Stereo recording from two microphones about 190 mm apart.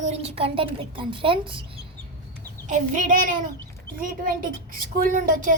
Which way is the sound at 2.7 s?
45° right (ahead or behind).